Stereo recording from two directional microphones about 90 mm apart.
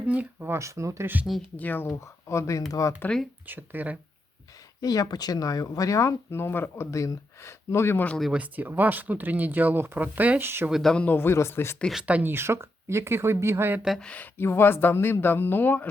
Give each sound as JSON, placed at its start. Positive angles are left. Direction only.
{"t": 0.0, "sound": "speech", "side_deg": -15}
{"t": 1.5, "sound": "speech", "side_deg": 20}
{"t": 2.3, "sound": "speech", "side_deg": 35}
{"t": 3.1, "sound": "speech", "side_deg": 15}
{"t": 3.4, "sound": "speech", "side_deg": -20}
{"t": 4.8, "sound": "speech", "side_deg": 40}
{"t": 8.3, "sound": "speech", "side_deg": -15}
{"t": 10.7, "sound": "speech", "side_deg": -5}
{"t": 10.9, "sound": "speech", "side_deg": 20}
{"t": 12.0, "sound": "speech", "side_deg": -20}
{"t": 14.0, "sound": "speech", "side_deg": 15}
{"t": 14.3, "sound": "speech", "side_deg": 25}